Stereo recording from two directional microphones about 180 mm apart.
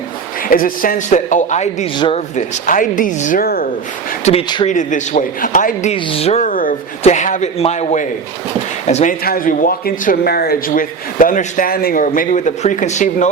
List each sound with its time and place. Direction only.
0.4 s a man's voice: 50° left (ahead or behind)
2.0 s speech: 30° left (ahead or behind)
2.3 s a man's voice: 45° left (ahead or behind)
4.3 s speech: 30° left (ahead or behind)
4.6 s a man's voice: 45° left (ahead or behind)
6.5 s a man's voice: 50° left (ahead or behind)
9.2 s a man's voice: 50° left (ahead or behind)